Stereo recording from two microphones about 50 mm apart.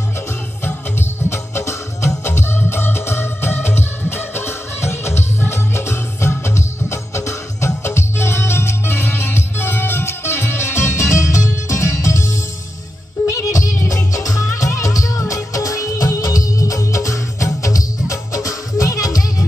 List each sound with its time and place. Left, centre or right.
1.3 s music: left